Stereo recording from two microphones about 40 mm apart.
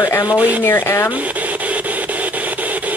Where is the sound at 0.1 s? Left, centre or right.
Left.